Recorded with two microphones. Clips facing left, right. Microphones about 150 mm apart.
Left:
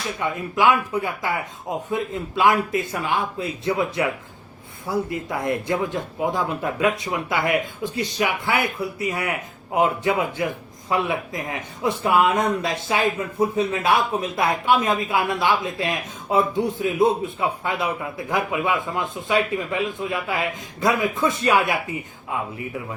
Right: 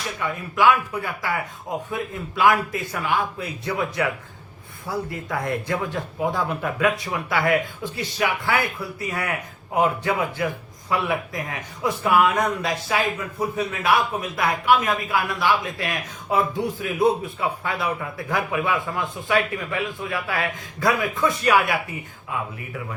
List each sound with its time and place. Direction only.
0.2 s speech: 20° left (ahead or behind)